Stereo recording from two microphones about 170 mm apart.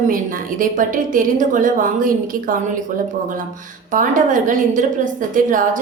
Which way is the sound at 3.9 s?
50° right (ahead or behind).